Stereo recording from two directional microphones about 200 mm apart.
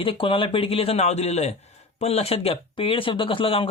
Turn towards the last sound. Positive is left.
turn(degrees=25)  # may be behind; listen again after turning